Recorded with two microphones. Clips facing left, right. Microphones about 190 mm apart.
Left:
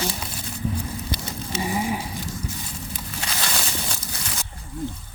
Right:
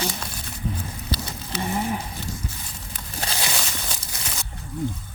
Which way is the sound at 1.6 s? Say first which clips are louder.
Even; 5° left (ahead or behind).